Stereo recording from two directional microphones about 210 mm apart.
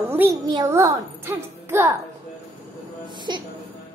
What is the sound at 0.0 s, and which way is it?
A child's voice, 10° right (ahead or behind).